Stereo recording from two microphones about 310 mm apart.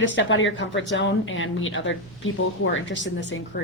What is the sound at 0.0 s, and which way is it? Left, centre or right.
Speech, left.